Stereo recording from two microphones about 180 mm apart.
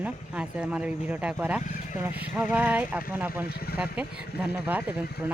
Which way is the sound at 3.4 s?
60° left (ahead or behind).